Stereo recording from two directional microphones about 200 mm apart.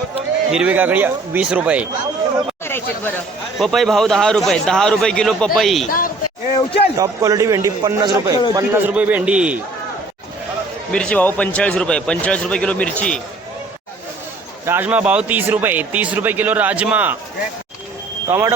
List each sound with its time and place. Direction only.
0.5 s a man's voice: 5° right (ahead or behind)
2.6 s speech: 10° left (ahead or behind)
6.5 s a sound: 25° left (ahead or behind)
6.9 s a man's voice: 15° right (ahead or behind)
10.9 s speech: 5° left (ahead or behind)
14.6 s a man's voice: 10° right (ahead or behind)
18.3 s a man's voice: 10° right (ahead or behind)